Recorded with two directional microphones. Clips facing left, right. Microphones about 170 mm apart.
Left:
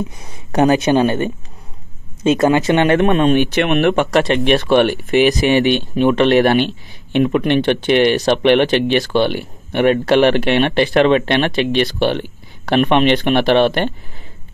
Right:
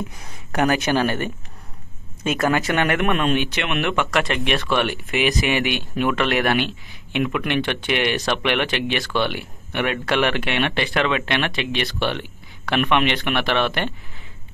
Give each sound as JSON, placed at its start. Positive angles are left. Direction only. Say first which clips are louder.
{"t": 0.2, "sound": "speech", "louder": "left 7 dB", "side_deg": 20}
{"t": 3.5, "sound": "speech", "louder": "left 9 dB", "side_deg": 40}